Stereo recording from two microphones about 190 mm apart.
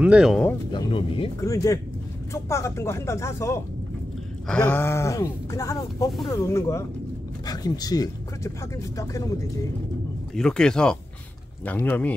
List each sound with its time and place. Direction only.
0.0 s speech: 5° right (ahead or behind)
0.7 s speech: 25° left (ahead or behind)
1.4 s speech: 15° left (ahead or behind)
10.3 s speech: 5° left (ahead or behind)